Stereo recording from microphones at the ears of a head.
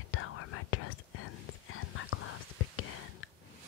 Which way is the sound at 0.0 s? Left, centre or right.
Left.